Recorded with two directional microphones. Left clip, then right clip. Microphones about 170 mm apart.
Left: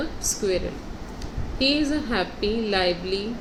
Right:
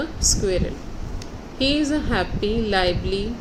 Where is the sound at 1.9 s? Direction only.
40° right (ahead or behind).